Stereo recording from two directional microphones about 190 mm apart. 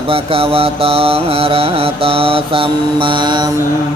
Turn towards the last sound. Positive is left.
turn(degrees=-20)  # may be behind; listen again after turning